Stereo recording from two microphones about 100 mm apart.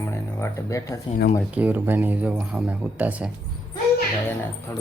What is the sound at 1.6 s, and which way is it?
Speech, 20° right (ahead or behind).